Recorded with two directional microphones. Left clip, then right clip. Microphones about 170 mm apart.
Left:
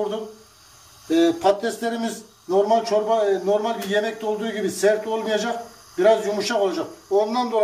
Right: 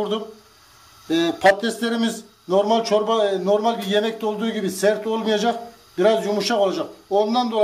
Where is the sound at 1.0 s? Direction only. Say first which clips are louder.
Right 1 dB; 60° right (ahead or behind).